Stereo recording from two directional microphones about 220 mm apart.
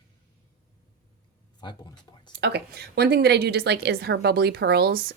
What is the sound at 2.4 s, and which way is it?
Speech, 50° right (ahead or behind).